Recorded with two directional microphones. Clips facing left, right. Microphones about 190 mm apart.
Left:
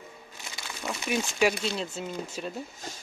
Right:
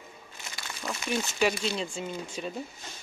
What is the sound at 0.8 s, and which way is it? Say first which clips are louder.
Speech: left 1 dB; 10° left (ahead or behind).